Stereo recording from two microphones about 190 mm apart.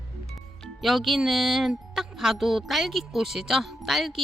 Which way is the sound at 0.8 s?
Centre (ahead or behind).